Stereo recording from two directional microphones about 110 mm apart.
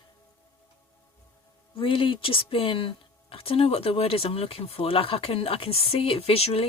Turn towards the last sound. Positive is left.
turn(degrees=65)  # may be behind; listen again after turning